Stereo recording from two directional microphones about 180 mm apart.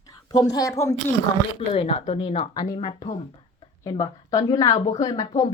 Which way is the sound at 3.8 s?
20° left (ahead or behind).